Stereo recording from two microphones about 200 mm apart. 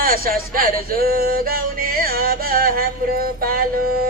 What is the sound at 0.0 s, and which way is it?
Speech, 45° right (ahead or behind).